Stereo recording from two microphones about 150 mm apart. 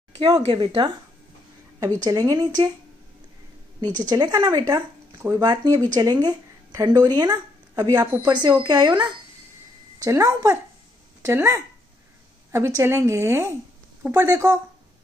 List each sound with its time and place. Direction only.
0.4 s speech: 35° right (ahead or behind)
3.8 s a woman's voice: 30° right (ahead or behind)